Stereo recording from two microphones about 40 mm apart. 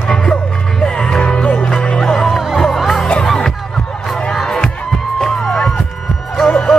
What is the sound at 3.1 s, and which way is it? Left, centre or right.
Music, left.